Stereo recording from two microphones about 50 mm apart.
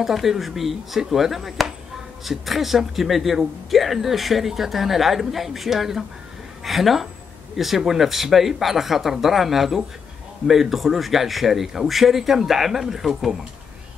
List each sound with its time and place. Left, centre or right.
0.0 s speech: centre